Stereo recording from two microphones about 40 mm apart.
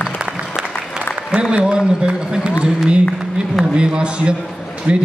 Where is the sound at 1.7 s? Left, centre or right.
Centre.